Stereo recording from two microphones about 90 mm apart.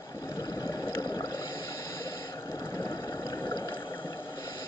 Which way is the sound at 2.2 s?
30° left (ahead or behind).